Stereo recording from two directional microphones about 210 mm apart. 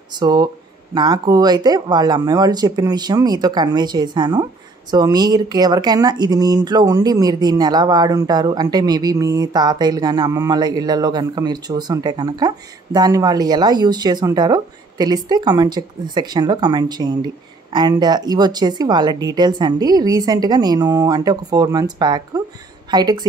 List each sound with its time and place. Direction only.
0.2 s speech: 20° right (ahead or behind)